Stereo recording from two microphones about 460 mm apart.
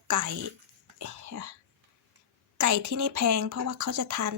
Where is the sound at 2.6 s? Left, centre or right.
Right.